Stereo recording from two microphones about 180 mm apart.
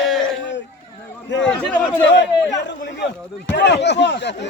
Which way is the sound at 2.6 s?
70° left (ahead or behind).